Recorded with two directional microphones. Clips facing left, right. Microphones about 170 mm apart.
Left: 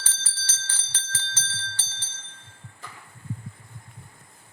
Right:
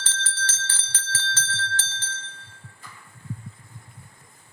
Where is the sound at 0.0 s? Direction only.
10° left (ahead or behind).